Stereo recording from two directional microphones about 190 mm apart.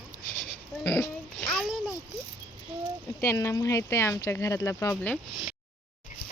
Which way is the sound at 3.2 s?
15° left (ahead or behind).